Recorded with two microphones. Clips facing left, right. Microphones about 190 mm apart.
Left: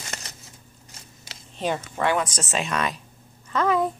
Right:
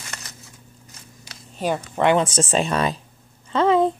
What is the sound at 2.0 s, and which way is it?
Speech, 25° right (ahead or behind).